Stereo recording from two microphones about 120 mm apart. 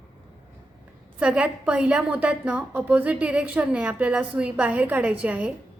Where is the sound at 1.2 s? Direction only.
10° right (ahead or behind).